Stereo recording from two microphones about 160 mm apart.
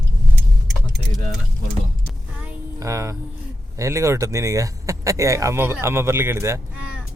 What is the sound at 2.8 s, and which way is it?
Music, 20° right (ahead or behind).